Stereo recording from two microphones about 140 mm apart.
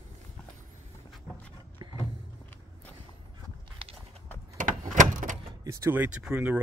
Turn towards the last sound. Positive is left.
turn(degrees=-10)  # may be behind; listen again after turning